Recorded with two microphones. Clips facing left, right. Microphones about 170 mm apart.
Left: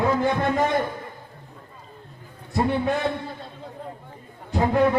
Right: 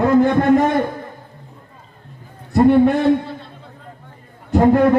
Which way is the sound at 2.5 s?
60° right (ahead or behind).